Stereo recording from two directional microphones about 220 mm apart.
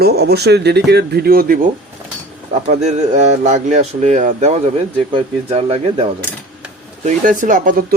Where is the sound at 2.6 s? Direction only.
30° right (ahead or behind).